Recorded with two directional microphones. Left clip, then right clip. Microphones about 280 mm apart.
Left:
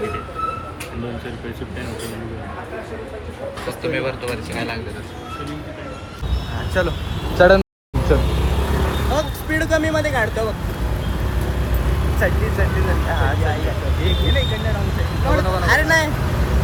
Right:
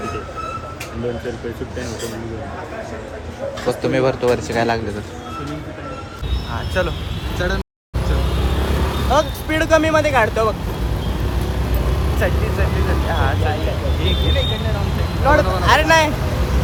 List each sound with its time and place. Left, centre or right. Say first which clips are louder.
3.8 s speech: right 6 dB; right
6.8 s speech: left 1 dB; centre
8.7 s speech: right 5 dB; centre
12.0 s speech: left 1 dB; centre